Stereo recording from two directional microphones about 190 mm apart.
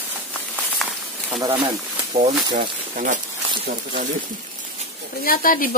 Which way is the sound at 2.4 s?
25° right (ahead or behind).